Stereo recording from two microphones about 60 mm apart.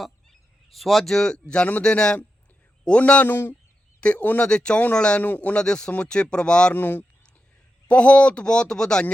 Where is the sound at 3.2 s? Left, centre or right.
Left.